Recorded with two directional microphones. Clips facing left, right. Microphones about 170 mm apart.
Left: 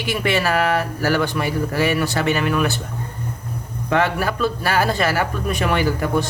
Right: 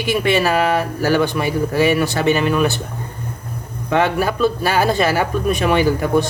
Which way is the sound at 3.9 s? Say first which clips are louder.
Right 3 dB; 20° right (ahead or behind).